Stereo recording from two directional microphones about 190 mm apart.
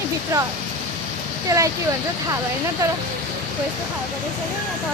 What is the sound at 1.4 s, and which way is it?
Speech, 15° right (ahead or behind).